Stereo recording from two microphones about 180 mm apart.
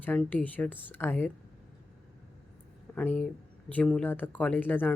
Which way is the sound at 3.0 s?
5° left (ahead or behind).